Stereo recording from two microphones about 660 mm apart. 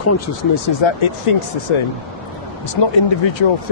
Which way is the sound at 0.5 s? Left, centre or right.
Left.